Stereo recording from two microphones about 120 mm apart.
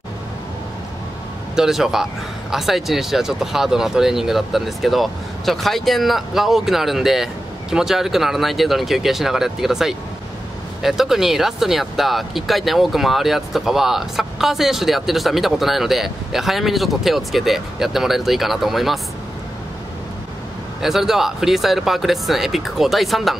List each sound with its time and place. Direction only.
1.5 s speech: 5° right (ahead or behind)
20.8 s speech: centre (ahead or behind)